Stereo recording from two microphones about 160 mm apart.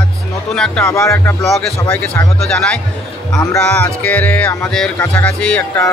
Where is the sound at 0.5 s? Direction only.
5° left (ahead or behind).